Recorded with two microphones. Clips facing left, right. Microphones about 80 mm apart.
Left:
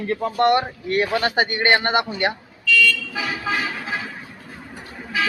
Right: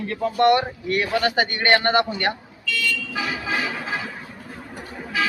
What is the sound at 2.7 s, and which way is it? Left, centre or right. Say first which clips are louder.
Vehicle: left 7 dB; right.